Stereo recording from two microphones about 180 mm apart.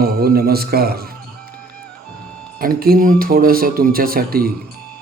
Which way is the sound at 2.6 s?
55° right (ahead or behind).